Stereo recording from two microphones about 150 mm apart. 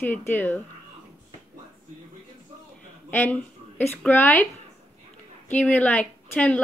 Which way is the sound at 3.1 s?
15° left (ahead or behind).